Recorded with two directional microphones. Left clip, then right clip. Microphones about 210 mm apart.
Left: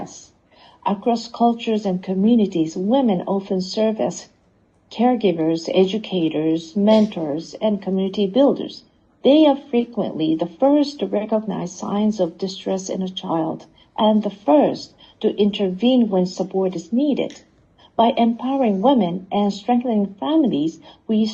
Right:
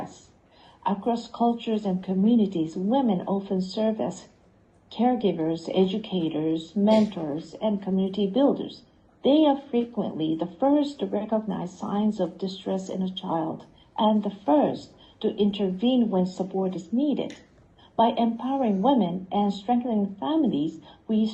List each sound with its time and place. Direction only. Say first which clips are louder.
0.8 s a woman's voice: left 6 dB; 25° left (ahead or behind)